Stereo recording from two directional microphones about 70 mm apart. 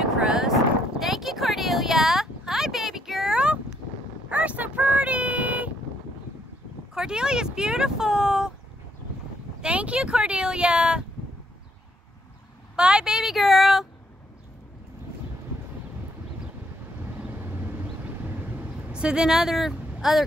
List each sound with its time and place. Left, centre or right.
0.0 s a sound: centre
6.9 s speech: centre
9.6 s speech: centre
12.7 s a sound: centre
18.3 s vehicle: right
18.9 s speech: centre